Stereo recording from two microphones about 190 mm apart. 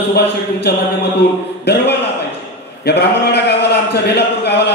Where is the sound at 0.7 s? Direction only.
55° left (ahead or behind).